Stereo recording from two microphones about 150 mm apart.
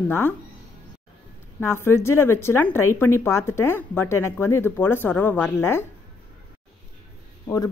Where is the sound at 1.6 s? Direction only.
15° left (ahead or behind).